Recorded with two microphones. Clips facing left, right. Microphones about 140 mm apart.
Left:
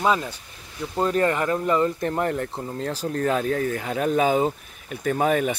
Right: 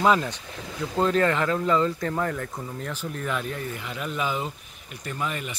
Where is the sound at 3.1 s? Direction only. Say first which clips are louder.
Left 9 dB; 55° left (ahead or behind).